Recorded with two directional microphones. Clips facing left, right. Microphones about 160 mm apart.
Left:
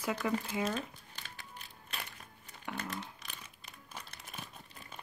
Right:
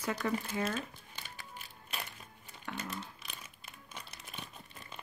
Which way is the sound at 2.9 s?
Centre (ahead or behind).